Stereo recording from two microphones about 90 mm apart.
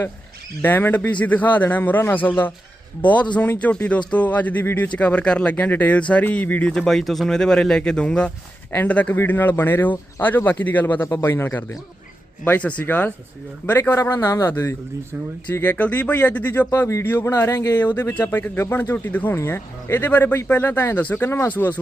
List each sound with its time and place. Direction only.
0.6 s speech: 20° left (ahead or behind)
13.9 s a man's voice: 35° left (ahead or behind)
16.6 s speech: 30° left (ahead or behind)
17.7 s speech: 20° left (ahead or behind)